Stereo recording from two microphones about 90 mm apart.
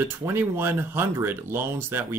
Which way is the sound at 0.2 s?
25° right (ahead or behind).